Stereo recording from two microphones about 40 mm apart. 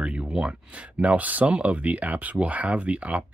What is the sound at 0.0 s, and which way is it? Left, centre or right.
Speech, right.